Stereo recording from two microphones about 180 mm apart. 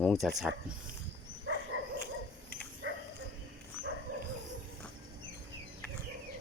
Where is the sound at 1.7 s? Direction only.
90° right.